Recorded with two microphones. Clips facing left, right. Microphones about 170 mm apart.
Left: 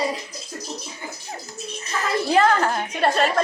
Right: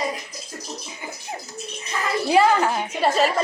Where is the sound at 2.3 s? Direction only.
10° right (ahead or behind).